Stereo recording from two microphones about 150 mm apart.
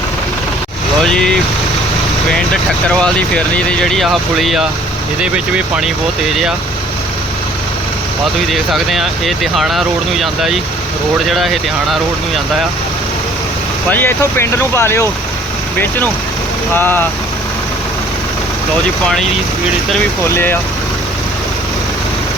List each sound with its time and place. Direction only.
1.0 s speech: 5° left (ahead or behind)
3.0 s speech: 5° left (ahead or behind)
8.4 s speech: centre (ahead or behind)
13.9 s speech: 15° left (ahead or behind)
16.7 s speech: 15° left (ahead or behind)
20.2 s speech: 15° left (ahead or behind)